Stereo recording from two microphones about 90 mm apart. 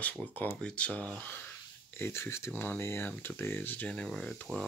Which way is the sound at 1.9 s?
30° left (ahead or behind).